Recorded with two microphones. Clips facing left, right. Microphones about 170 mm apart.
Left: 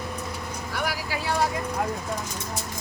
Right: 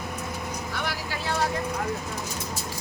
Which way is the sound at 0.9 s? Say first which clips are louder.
Left 2 dB; 10° left (ahead or behind).